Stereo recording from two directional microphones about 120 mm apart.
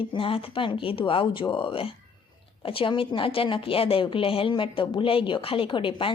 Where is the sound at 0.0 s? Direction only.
45° left (ahead or behind).